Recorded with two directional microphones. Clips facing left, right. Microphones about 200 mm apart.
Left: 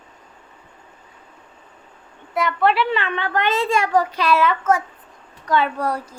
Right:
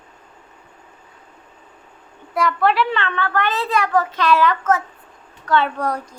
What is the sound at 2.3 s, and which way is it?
A child's voice, centre (ahead or behind).